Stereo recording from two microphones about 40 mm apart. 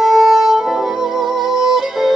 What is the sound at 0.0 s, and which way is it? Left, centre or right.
Music, centre.